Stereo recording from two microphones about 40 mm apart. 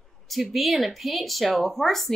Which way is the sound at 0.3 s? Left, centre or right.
Centre.